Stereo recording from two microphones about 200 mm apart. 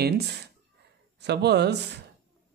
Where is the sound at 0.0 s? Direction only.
55° right (ahead or behind).